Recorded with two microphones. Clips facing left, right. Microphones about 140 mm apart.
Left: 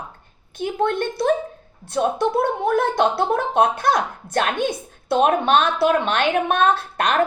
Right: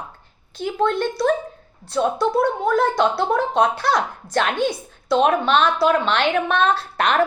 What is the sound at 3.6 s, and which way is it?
A woman's voice, 50° left (ahead or behind).